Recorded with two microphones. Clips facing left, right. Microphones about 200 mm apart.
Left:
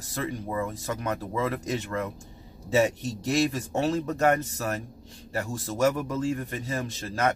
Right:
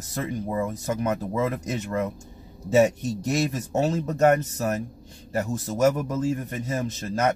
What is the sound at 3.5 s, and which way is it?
Speech, 20° right (ahead or behind).